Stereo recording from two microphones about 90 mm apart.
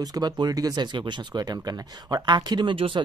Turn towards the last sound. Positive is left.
turn(degrees=-75)  # may be behind; listen again after turning